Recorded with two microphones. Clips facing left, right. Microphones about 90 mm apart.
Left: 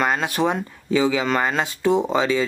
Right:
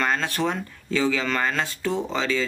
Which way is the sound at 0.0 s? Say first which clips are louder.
Left 3 dB; 15° left (ahead or behind).